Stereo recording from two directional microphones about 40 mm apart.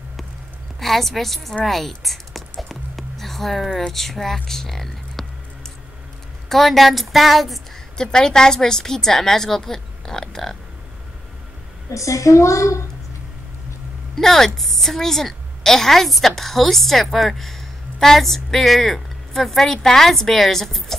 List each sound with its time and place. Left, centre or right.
0.7 s a woman's voice: centre
2.7 s a sound: centre
3.7 s a woman's voice: centre
6.5 s a woman's voice: centre
8.0 s a woman's voice: centre
14.1 s a woman's voice: centre